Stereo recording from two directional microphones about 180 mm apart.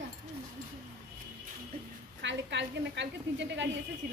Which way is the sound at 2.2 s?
80° right.